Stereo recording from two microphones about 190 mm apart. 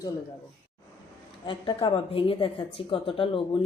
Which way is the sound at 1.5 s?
25° left (ahead or behind).